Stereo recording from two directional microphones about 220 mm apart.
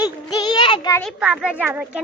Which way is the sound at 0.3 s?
20° left (ahead or behind).